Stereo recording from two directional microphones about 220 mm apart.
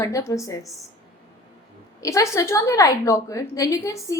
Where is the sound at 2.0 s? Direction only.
15° left (ahead or behind).